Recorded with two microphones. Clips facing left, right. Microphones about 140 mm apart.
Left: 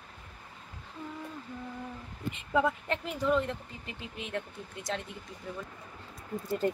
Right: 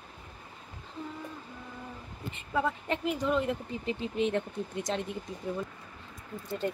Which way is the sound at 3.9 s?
25° right (ahead or behind).